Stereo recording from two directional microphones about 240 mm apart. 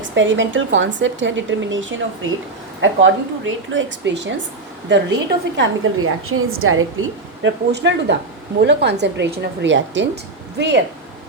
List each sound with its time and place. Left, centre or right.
0.1 s a woman's voice: right
7.4 s a woman's voice: right